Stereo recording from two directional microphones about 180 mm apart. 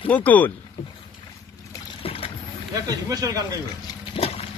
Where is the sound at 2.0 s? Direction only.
30° left (ahead or behind).